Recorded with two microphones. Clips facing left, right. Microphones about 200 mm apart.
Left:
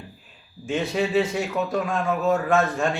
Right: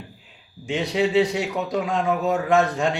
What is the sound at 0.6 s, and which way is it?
A man's voice, 15° right (ahead or behind).